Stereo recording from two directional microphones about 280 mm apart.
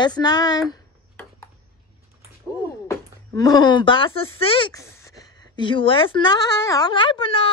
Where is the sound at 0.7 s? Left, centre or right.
Centre.